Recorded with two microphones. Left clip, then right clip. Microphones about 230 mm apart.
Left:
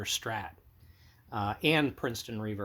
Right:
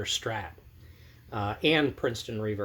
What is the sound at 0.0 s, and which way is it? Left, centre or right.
Speech, left.